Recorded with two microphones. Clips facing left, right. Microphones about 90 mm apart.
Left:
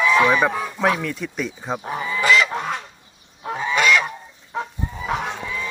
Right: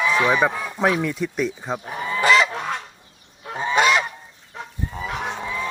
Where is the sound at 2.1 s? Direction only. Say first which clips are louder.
Right 1 dB; 35° right (ahead or behind).